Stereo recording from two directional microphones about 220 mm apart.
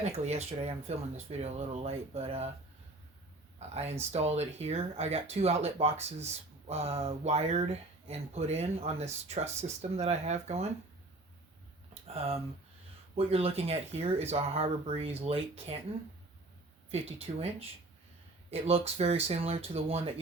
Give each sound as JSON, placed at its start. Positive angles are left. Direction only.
{"t": 0.0, "sound": "speech", "side_deg": -30}
{"t": 4.1, "sound": "speech", "side_deg": -30}
{"t": 12.0, "sound": "speech", "side_deg": -25}
{"t": 16.9, "sound": "speech", "side_deg": -30}